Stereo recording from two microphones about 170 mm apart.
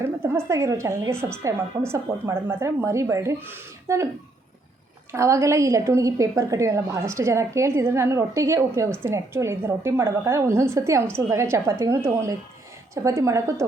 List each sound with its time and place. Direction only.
0.0 s a woman's voice: 15° right (ahead or behind)
5.1 s a woman's voice: 15° right (ahead or behind)